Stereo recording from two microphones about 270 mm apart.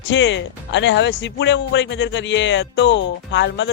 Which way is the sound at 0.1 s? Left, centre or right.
Left.